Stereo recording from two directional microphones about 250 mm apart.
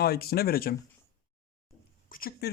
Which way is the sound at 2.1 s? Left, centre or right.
Left.